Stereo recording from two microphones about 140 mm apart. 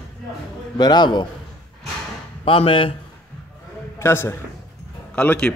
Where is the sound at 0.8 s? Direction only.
30° left (ahead or behind).